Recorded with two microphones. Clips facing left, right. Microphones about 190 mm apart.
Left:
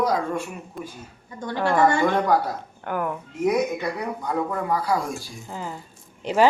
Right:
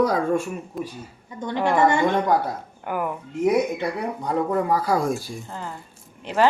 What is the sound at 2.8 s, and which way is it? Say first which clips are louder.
Speech: even; 5° right (ahead or behind).